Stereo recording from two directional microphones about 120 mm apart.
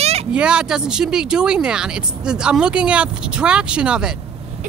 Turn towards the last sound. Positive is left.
turn(degrees=-10)  # may be behind; listen again after turning